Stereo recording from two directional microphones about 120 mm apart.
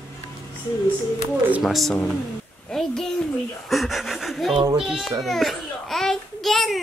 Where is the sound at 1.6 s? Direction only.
Centre (ahead or behind).